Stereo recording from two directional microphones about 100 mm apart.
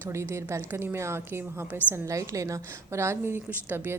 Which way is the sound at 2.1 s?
35° right (ahead or behind).